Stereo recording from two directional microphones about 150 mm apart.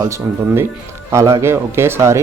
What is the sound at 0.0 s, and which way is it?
A man's voice, 20° right (ahead or behind).